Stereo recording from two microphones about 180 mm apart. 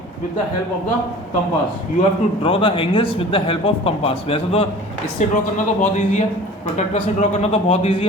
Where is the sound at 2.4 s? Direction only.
30° left (ahead or behind).